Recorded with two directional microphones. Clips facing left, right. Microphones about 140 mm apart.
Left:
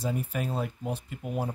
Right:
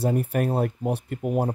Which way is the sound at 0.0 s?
60° right (ahead or behind).